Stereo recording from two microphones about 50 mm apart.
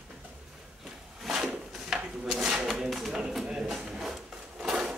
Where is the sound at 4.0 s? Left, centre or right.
Centre.